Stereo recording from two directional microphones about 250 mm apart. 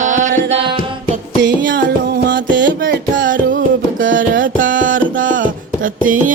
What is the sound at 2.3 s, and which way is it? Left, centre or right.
Music, right.